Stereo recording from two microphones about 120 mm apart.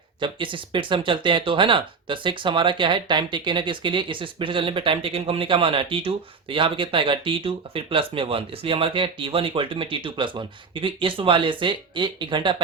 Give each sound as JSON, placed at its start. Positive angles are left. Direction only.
{"t": 0.2, "sound": "speech", "side_deg": -45}